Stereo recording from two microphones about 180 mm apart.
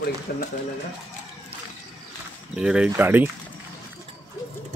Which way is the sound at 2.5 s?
5° right (ahead or behind).